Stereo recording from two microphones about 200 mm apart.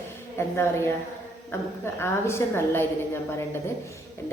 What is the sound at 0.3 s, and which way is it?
A woman's voice, 10° left (ahead or behind).